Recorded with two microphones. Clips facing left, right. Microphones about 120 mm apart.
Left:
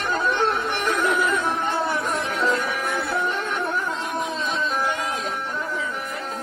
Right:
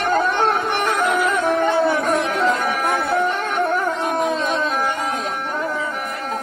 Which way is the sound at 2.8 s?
45° right (ahead or behind).